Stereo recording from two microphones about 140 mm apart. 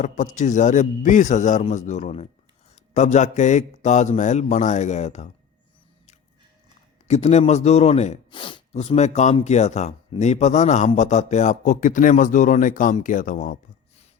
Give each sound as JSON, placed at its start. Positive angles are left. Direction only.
{"t": 0.0, "sound": "speech", "side_deg": 60}
{"t": 7.1, "sound": "a man's voice", "side_deg": 50}
{"t": 8.3, "sound": "a sound", "side_deg": 35}
{"t": 8.7, "sound": "a man's voice", "side_deg": 50}